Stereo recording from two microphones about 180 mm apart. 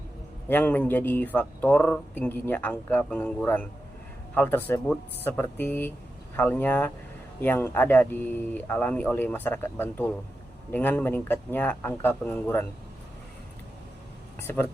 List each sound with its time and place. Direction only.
0.4 s speech: 10° left (ahead or behind)
14.4 s speech: 10° left (ahead or behind)